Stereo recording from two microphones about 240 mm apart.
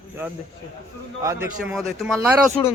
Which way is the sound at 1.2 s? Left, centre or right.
Centre.